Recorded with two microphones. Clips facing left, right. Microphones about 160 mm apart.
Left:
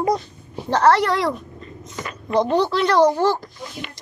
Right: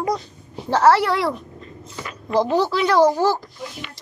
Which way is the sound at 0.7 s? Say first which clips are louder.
Right 1 dB; 5° right (ahead or behind).